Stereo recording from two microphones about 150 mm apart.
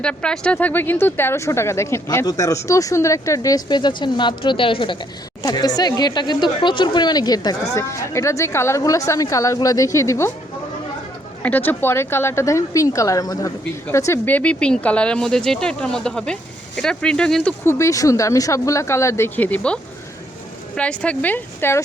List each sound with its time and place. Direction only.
0.0 s speech: 5° left (ahead or behind)
11.4 s speech: 10° left (ahead or behind)
17.7 s a woman's voice: 20° left (ahead or behind)